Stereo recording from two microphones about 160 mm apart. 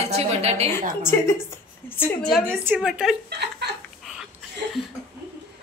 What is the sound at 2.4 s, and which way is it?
Speech, 10° right (ahead or behind).